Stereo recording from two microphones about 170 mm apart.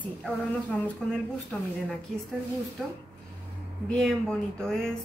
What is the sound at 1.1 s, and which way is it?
Speech, 5° left (ahead or behind).